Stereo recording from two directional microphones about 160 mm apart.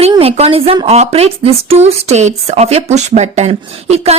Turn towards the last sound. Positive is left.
turn(degrees=-40)  # may be behind; listen again after turning